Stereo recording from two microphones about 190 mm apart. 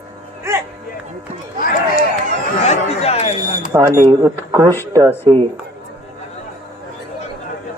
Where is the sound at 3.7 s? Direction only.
15° right (ahead or behind).